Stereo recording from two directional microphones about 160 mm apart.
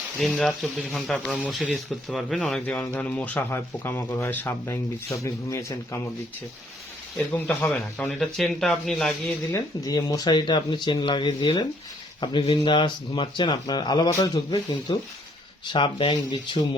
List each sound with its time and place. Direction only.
0.2 s speech: centre (ahead or behind); by 6.0 s 20° left (ahead or behind)
7.3 s speech: 10° left (ahead or behind)
9.5 s speech: 20° left (ahead or behind)